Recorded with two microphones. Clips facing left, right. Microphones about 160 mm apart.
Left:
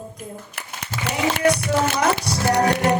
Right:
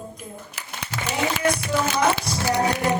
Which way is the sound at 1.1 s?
70° left (ahead or behind).